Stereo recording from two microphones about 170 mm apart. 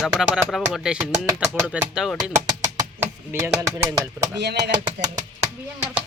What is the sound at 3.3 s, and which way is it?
Speech, 10° right (ahead or behind).